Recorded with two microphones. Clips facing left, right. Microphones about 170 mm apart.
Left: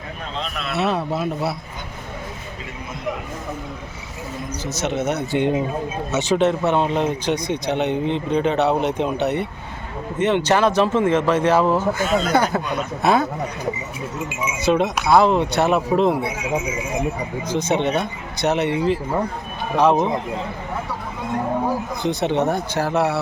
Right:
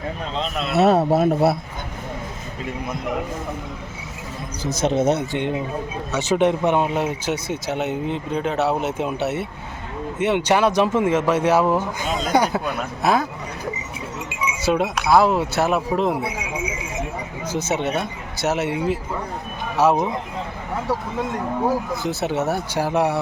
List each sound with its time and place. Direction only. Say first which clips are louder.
0.5 s speech: right 3 dB; 30° right (ahead or behind)
0.8 s speech: right 7 dB; 45° right (ahead or behind)
4.8 s speech: right 4 dB; 30° right (ahead or behind)
6.1 s speech: left 2 dB; 20° left (ahead or behind)
6.3 s speech: even; 15° right (ahead or behind)
14.6 s speech: left 2 dB; 5° right (ahead or behind)
17.5 s speech: left 3 dB; 5° right (ahead or behind)
22.0 s speech: left 6 dB; 5° right (ahead or behind)